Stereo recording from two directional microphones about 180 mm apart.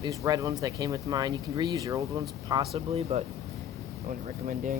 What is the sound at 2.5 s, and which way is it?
Speech, 30° right (ahead or behind).